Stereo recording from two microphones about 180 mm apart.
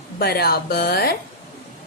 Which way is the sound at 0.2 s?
60° left (ahead or behind).